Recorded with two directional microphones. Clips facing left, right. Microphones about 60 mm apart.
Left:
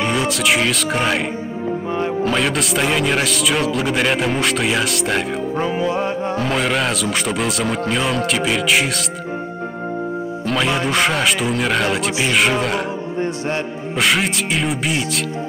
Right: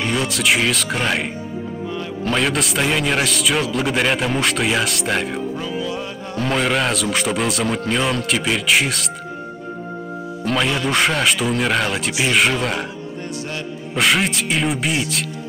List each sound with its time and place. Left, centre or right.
0.0 s speech: centre
2.2 s speech: centre
5.6 s music: left
6.3 s speech: centre
10.4 s music: centre
10.9 s speech: centre
13.9 s speech: centre